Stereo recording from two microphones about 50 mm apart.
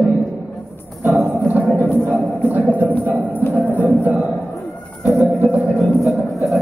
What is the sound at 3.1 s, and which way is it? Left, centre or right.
Music, right.